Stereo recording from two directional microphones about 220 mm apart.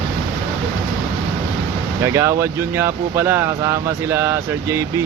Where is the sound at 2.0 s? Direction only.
10° right (ahead or behind).